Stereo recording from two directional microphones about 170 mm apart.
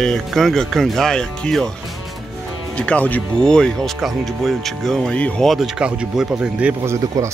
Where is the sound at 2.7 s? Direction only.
5° left (ahead or behind).